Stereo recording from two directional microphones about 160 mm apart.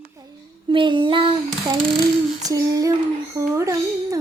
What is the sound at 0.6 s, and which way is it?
Female singing, 30° right (ahead or behind).